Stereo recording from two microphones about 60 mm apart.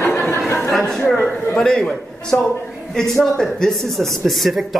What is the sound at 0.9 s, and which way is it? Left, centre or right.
Speech, centre.